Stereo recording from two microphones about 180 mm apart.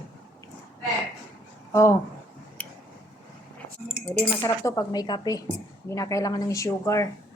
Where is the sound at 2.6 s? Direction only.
10° left (ahead or behind).